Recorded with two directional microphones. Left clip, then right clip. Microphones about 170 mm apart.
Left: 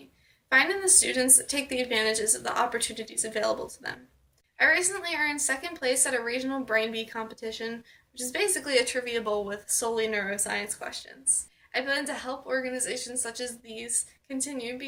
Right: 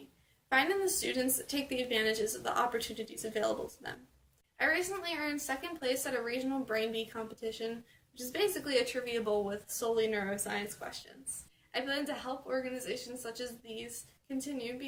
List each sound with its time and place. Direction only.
0.5 s a woman's voice: 15° right (ahead or behind)
4.5 s a woman's voice: 15° right (ahead or behind)